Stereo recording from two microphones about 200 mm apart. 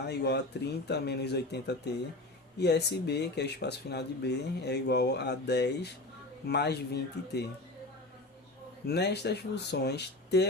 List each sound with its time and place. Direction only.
0.0 s speech: 55° left (ahead or behind)
8.9 s speech: 55° left (ahead or behind)